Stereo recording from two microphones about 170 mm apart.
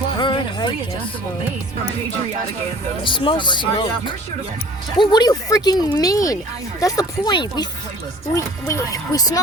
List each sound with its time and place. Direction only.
0.2 s music: 30° left (ahead or behind)
3.0 s speech: 30° left (ahead or behind)